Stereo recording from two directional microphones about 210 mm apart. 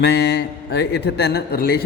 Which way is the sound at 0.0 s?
50° left (ahead or behind).